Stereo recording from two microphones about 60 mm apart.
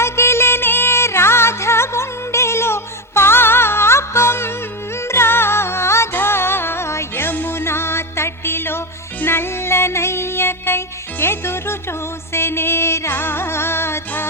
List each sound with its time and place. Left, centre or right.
0.0 s music: left